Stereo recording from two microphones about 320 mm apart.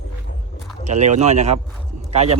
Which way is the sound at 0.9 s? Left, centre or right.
Right.